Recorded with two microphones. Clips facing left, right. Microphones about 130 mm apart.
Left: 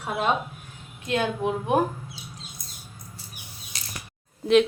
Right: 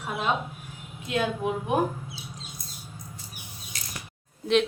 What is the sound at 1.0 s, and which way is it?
Speech, 5° right (ahead or behind).